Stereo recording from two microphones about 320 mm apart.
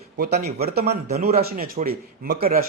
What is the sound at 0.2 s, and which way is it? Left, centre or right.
A man's voice, right.